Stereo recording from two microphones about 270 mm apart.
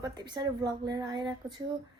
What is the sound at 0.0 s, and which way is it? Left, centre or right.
A woman's voice, centre.